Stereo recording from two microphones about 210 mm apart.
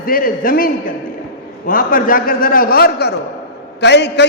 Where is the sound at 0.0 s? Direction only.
45° left (ahead or behind).